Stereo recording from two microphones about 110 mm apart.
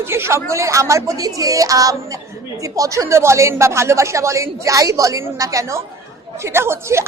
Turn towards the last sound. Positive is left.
turn(degrees=-25)  # may be behind; listen again after turning